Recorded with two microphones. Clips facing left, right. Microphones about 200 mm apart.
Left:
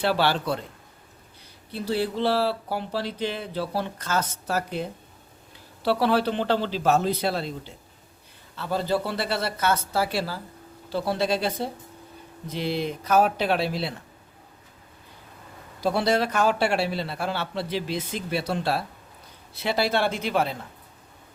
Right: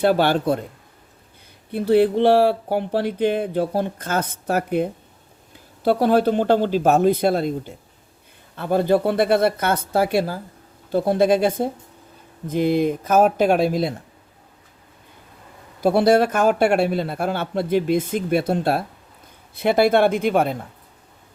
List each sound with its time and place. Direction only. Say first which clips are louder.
0.0 s speech: right 6 dB; 50° right (ahead or behind)
1.7 s speech: right 10 dB; 55° right (ahead or behind)
15.8 s speech: right 7 dB; 50° right (ahead or behind)